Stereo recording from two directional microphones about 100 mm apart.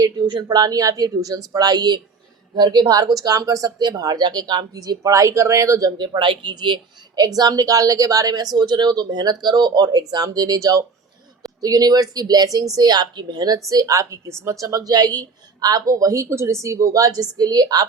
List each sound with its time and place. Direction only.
0.0 s a woman's voice: 45° right (ahead or behind); by 5.9 s 30° right (ahead or behind)
6.0 s speech: 55° right (ahead or behind)
7.2 s a woman's voice: 40° right (ahead or behind)